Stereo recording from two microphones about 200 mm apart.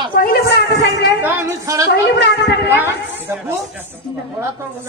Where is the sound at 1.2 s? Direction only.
15° right (ahead or behind).